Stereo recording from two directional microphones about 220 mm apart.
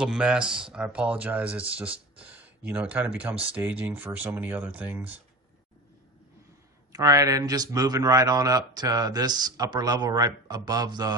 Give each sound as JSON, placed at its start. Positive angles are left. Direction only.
{"t": 0.0, "sound": "a man's voice", "side_deg": -5}
{"t": 6.9, "sound": "a man's voice", "side_deg": -15}